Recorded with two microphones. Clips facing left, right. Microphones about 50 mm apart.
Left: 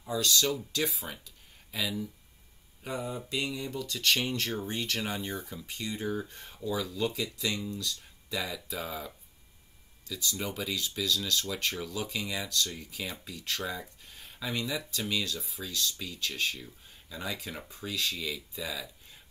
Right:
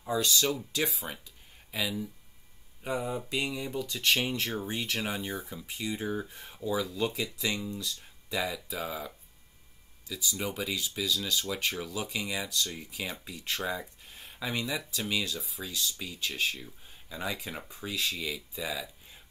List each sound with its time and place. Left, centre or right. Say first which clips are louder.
0.2 s speech: left 4 dB; centre